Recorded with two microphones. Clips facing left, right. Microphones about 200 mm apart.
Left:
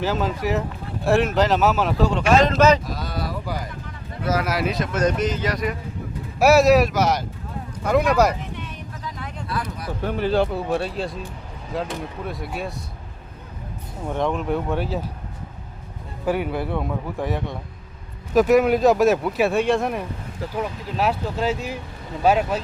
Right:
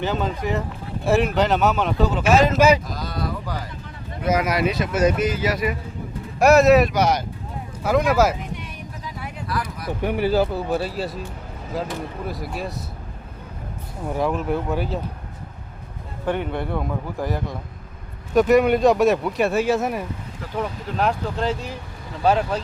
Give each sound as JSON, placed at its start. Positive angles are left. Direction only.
{"t": 0.0, "sound": "speech", "side_deg": 0}
{"t": 2.8, "sound": "speech", "side_deg": 0}
{"t": 4.2, "sound": "speech", "side_deg": -15}
{"t": 4.4, "sound": "speech", "side_deg": 0}
{"t": 8.5, "sound": "vehicle", "side_deg": -10}
{"t": 9.5, "sound": "a sound", "side_deg": 25}
{"t": 10.0, "sound": "speech", "side_deg": -15}
{"t": 14.1, "sound": "speech", "side_deg": -5}
{"t": 16.2, "sound": "speech", "side_deg": 5}